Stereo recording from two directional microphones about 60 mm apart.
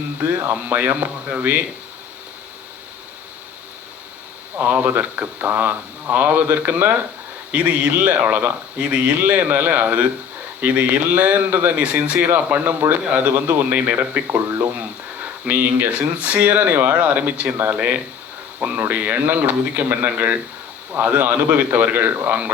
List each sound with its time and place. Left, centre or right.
0.5 s speech: right
4.5 s speech: right